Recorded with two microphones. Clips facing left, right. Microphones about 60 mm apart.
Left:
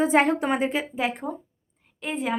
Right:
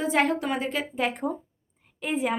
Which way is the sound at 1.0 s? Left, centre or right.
Centre.